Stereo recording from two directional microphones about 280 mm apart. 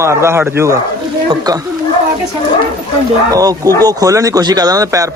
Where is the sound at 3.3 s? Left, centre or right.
Centre.